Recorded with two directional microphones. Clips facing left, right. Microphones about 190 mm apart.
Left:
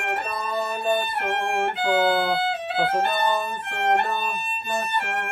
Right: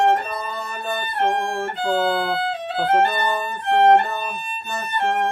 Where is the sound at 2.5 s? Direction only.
10° left (ahead or behind).